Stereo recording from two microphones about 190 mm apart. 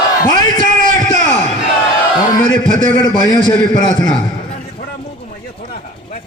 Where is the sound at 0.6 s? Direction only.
45° right (ahead or behind).